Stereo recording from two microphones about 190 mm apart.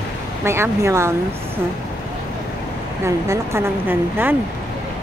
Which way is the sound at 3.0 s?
15° right (ahead or behind).